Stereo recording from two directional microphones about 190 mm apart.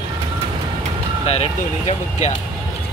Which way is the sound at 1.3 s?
35° left (ahead or behind).